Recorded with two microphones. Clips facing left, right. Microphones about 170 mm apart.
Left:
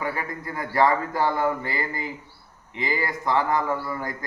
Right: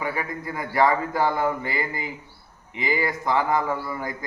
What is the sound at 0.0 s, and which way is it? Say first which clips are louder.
A man's voice: right 1 dB; 15° right (ahead or behind).